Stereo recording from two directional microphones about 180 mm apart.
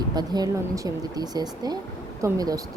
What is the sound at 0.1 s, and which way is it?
A woman's voice, 20° right (ahead or behind).